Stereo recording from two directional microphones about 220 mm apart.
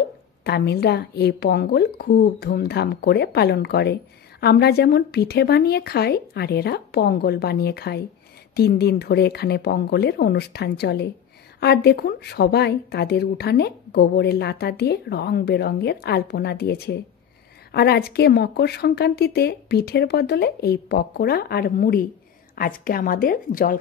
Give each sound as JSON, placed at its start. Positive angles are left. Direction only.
{"t": 0.4, "sound": "a woman's voice", "side_deg": 50}